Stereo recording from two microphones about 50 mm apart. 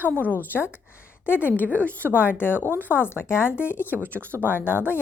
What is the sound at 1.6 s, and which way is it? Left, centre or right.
Speech, right.